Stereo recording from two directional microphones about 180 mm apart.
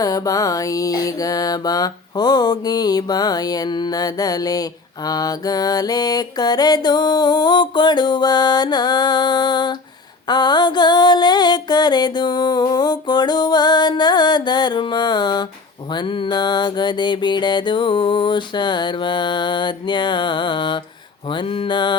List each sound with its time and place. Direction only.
0.0 s mantra: 20° left (ahead or behind)